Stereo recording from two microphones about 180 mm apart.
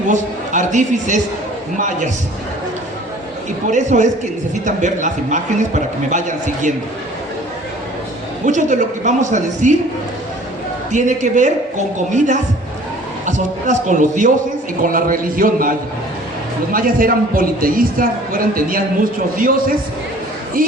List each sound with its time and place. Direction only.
0.1 s a man's voice: 45° right (ahead or behind)
3.7 s a man's voice: 45° right (ahead or behind)
8.4 s a man's voice: 45° right (ahead or behind)
10.9 s a man's voice: 45° right (ahead or behind)
16.7 s a man's voice: 50° right (ahead or behind)